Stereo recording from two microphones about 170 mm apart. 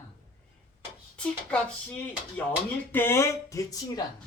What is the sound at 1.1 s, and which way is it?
Speech, 5° left (ahead or behind).